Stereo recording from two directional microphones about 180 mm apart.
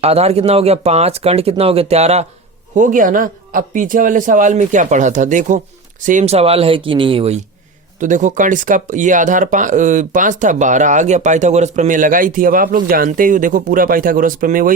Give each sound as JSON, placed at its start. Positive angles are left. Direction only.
{"t": 0.0, "sound": "speech", "side_deg": -35}
{"t": 7.9, "sound": "speech", "side_deg": -45}